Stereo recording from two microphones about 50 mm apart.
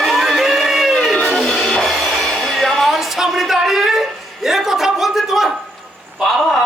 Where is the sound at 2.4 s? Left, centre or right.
Centre.